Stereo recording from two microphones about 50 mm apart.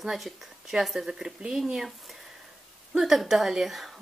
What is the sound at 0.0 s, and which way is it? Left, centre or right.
Speech, centre.